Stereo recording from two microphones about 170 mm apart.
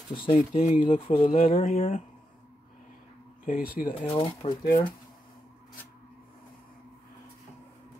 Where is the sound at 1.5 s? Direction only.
50° left (ahead or behind).